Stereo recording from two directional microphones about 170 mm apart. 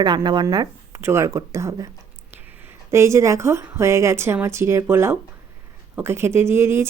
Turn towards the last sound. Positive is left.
turn(degrees=-15)  # may be behind; listen again after turning